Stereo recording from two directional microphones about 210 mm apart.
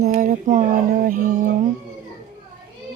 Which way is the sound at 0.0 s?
35° right (ahead or behind).